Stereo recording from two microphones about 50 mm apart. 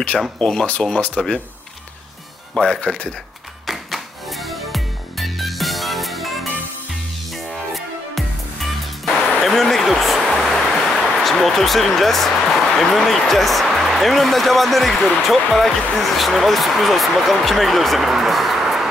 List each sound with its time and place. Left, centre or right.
0.4 s speech: centre
2.5 s speech: centre
3.6 s music: centre
9.4 s a sound: centre
12.7 s speech: centre